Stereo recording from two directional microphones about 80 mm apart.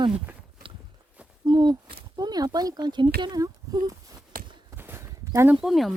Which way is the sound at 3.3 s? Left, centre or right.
Right.